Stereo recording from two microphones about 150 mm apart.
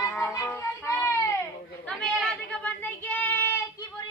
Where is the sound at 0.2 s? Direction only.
15° left (ahead or behind).